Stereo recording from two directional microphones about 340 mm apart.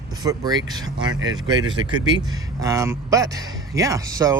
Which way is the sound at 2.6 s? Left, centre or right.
Centre.